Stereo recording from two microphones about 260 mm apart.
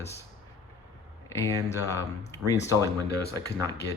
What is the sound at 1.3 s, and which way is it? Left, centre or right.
Speech, centre.